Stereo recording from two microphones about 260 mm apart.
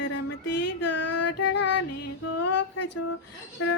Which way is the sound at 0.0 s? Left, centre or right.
Left.